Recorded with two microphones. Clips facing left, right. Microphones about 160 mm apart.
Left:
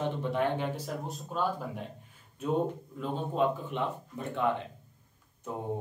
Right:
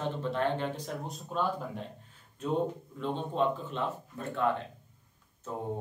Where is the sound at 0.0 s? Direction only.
15° left (ahead or behind).